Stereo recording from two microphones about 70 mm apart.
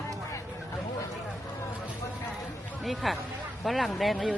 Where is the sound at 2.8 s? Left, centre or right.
Centre.